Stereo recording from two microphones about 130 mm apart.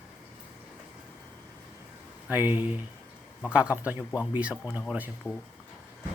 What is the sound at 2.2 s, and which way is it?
Speech, 15° right (ahead or behind).